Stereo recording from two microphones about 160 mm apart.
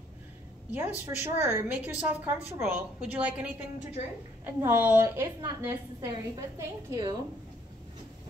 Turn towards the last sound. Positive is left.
turn(degrees=-20)  # may be behind; listen again after turning